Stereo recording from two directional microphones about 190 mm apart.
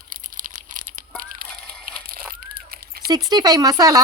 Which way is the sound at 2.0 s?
50° right (ahead or behind).